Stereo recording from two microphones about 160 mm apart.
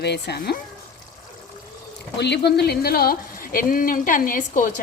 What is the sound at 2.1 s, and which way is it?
Speech, 90° left.